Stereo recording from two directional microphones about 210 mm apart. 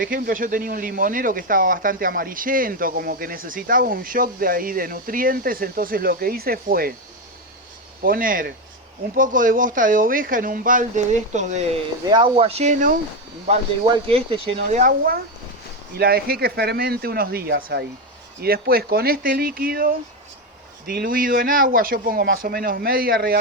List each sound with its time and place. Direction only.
0.0 s speech: 40° right (ahead or behind)
8.0 s speech: 40° right (ahead or behind)
12.0 s speech: 20° right (ahead or behind); by 13.0 s 35° right (ahead or behind)
13.5 s speech: 25° right (ahead or behind); by 23.4 s 45° right (ahead or behind)